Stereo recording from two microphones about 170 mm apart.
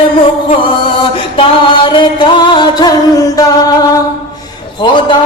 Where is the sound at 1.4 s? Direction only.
30° left (ahead or behind).